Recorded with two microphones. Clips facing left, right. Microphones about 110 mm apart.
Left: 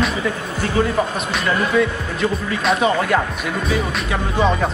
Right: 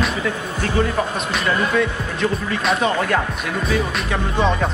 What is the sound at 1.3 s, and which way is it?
A man's voice, centre (ahead or behind).